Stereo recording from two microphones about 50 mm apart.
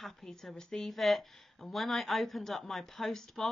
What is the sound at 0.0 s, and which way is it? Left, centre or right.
Speech, centre.